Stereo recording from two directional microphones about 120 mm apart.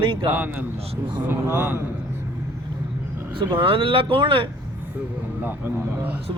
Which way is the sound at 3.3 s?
45° right (ahead or behind).